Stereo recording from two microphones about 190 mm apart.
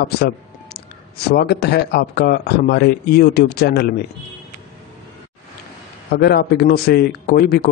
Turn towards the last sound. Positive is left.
turn(degrees=50)  # may be behind; listen again after turning